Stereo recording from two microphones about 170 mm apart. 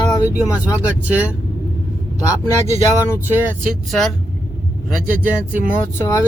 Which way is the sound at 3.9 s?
Centre (ahead or behind).